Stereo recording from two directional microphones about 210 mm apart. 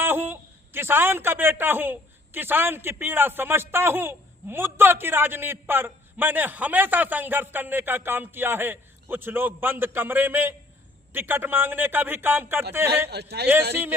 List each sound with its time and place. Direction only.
0.0 s a man's voice: 10° right (ahead or behind)
13.1 s a man's voice: 50° right (ahead or behind)